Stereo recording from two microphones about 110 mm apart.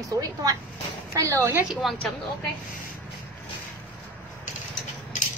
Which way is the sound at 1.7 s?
Centre (ahead or behind).